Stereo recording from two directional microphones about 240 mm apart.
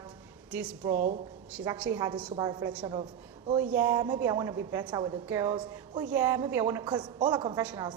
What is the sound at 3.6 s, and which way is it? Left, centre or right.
A woman's voice, centre.